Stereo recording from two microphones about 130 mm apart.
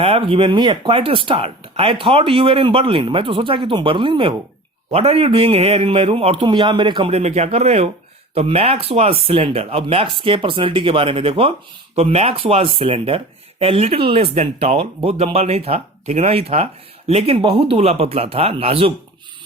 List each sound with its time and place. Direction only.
0.0 s speech: 45° right (ahead or behind)
4.9 s speech: 50° right (ahead or behind)
7.1 s speech: 55° right (ahead or behind)